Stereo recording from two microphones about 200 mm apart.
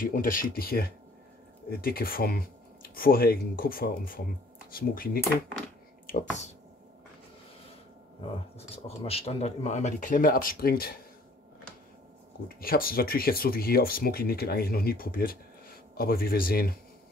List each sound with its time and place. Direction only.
0.0 s speech: 45° left (ahead or behind)
8.2 s speech: 30° left (ahead or behind); by 11.0 s 50° left (ahead or behind)
12.4 s speech: 45° left (ahead or behind)